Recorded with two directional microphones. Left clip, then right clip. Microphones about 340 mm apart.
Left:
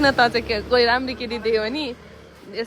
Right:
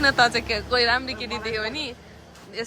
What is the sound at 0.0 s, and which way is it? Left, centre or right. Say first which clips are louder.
Speech: left 2 dB; centre.